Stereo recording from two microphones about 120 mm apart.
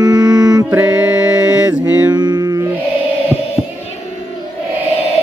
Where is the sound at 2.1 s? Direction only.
35° right (ahead or behind).